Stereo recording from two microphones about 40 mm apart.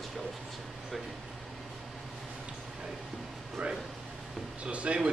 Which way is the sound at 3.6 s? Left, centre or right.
Right.